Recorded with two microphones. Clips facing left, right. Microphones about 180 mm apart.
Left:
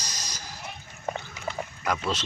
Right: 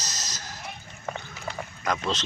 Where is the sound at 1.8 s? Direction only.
10° left (ahead or behind).